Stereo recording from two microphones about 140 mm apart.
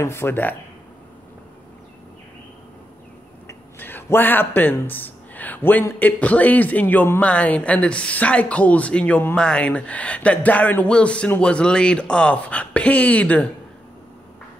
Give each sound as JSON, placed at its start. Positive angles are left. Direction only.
{"t": 0.0, "sound": "speech", "side_deg": 15}
{"t": 3.4, "sound": "speech", "side_deg": 15}